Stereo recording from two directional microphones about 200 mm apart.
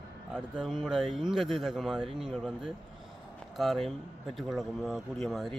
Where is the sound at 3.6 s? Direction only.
Centre (ahead or behind).